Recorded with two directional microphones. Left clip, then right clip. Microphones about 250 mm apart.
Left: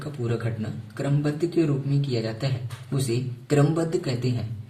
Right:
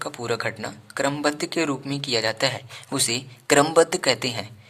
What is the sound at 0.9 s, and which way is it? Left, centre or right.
A man's voice, right.